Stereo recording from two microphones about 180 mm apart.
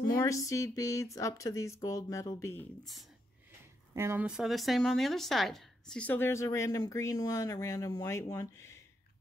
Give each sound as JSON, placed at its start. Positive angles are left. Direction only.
{"t": 0.1, "sound": "speech", "side_deg": 15}
{"t": 3.9, "sound": "speech", "side_deg": -15}